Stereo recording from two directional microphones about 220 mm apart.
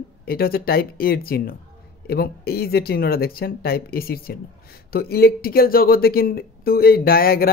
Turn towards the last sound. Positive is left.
turn(degrees=45)  # may be behind; listen again after turning